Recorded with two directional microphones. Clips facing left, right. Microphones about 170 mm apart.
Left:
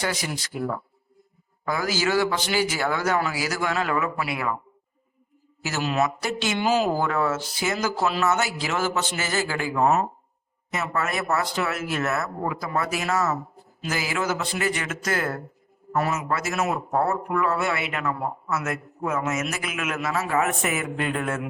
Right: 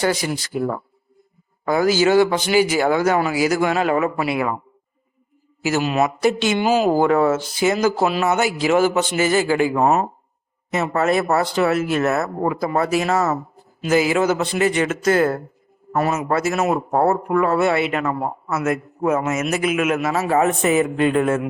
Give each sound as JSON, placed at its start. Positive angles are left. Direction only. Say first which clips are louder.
{"t": 0.0, "sound": "speech", "louder": "right 8 dB", "side_deg": -30}
{"t": 1.6, "sound": "a man's voice", "louder": "right 9 dB", "side_deg": -25}
{"t": 5.6, "sound": "a man's voice", "louder": "right 6 dB", "side_deg": -15}
{"t": 9.7, "sound": "speech", "louder": "even", "side_deg": -40}
{"t": 10.7, "sound": "a man's voice", "louder": "right 8 dB", "side_deg": -25}